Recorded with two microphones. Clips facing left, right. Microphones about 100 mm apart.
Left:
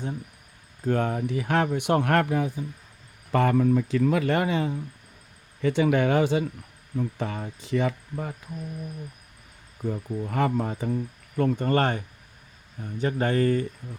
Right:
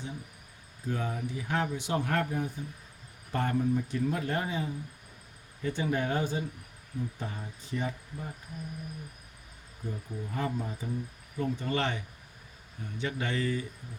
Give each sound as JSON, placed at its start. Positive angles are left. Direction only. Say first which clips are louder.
{"t": 0.9, "sound": "speech", "louder": "left 9 dB", "side_deg": 65}
{"t": 3.3, "sound": "speech", "louder": "left 8 dB", "side_deg": 90}
{"t": 6.9, "sound": "speech", "louder": "left 8 dB", "side_deg": 80}
{"t": 9.8, "sound": "speech", "louder": "left 9 dB", "side_deg": 70}
{"t": 11.3, "sound": "speech", "louder": "left 8 dB", "side_deg": 60}